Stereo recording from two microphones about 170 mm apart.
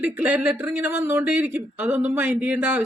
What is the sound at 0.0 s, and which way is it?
Speech, 10° right (ahead or behind).